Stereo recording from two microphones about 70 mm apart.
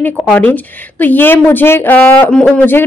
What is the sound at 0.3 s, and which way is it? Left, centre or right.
A woman's voice, left.